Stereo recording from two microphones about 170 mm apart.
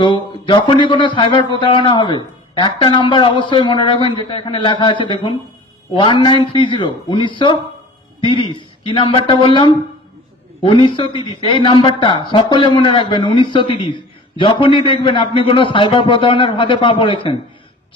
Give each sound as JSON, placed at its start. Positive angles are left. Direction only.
{"t": 0.0, "sound": "a man's voice", "side_deg": 30}